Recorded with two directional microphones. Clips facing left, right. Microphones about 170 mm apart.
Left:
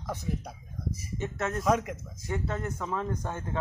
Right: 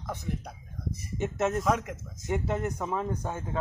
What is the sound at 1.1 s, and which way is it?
Speech, 20° right (ahead or behind).